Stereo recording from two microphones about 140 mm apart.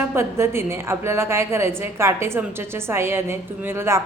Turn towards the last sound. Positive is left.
turn(degrees=-20)  # may be behind; listen again after turning